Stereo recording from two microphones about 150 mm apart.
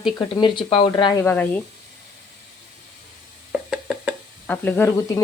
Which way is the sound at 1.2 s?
10° left (ahead or behind).